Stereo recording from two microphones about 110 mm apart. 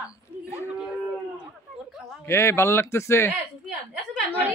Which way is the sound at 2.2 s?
25° left (ahead or behind).